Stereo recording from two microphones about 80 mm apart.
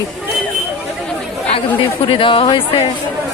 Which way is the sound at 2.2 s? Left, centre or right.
Left.